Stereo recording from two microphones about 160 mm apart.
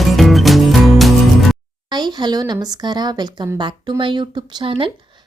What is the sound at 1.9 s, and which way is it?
A woman's voice, 25° right (ahead or behind).